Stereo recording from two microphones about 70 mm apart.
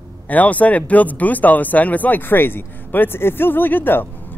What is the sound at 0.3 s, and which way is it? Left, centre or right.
Speech, left.